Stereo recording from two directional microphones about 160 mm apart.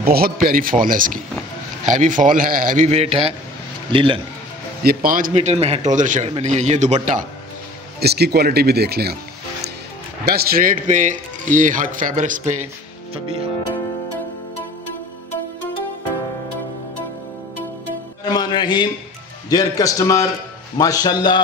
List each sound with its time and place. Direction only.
0.0 s a man's voice: 70° right (ahead or behind); by 3.3 s 40° right (ahead or behind)
3.9 s music: 35° right (ahead or behind)
4.8 s a man's voice: 60° right (ahead or behind)
5.3 s a man's voice: 45° right (ahead or behind)
8.0 s speech: 85° right
10.2 s a man's voice: 75° right (ahead or behind); by 12.5 s 50° right (ahead or behind)
13.1 s music: 35° right (ahead or behind)
18.2 s music: 25° left (ahead or behind)
19.5 s a man's voice: 20° left (ahead or behind)